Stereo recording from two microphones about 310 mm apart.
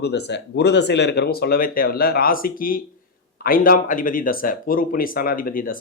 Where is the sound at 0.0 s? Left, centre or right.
Left.